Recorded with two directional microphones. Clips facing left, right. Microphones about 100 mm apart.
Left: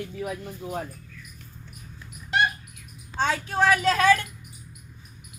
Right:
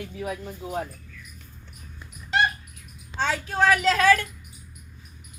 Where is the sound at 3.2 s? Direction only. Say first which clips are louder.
Even; 20° left (ahead or behind).